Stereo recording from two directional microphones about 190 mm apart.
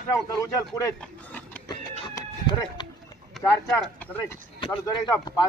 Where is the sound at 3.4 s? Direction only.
5° left (ahead or behind).